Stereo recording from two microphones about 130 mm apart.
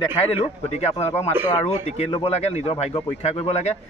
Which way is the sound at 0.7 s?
55° left (ahead or behind).